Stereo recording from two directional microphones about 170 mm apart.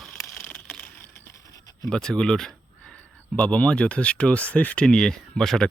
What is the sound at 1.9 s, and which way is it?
Speech, 5° left (ahead or behind).